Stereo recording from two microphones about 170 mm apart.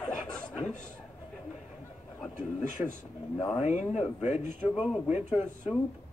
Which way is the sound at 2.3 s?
45° left (ahead or behind).